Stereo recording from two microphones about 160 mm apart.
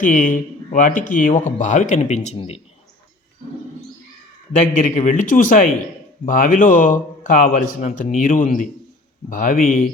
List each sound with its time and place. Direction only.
0.0 s speech: 55° left (ahead or behind)
4.8 s a man's voice: 55° left (ahead or behind)